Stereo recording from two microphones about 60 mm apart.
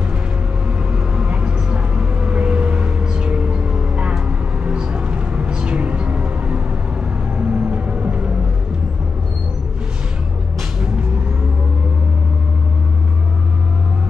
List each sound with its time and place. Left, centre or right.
0.9 s vehicle: centre
4.6 s music: centre
7.3 s vehicle: right